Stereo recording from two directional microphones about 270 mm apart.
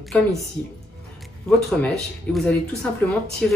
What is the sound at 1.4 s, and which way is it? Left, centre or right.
Speech, centre.